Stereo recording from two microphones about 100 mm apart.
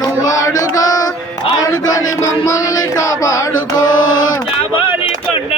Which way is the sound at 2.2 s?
35° left (ahead or behind).